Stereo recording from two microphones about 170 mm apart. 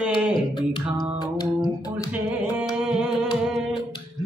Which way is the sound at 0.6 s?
25° left (ahead or behind).